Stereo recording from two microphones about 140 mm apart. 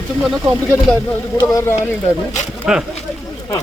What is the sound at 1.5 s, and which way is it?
Speech, 20° left (ahead or behind).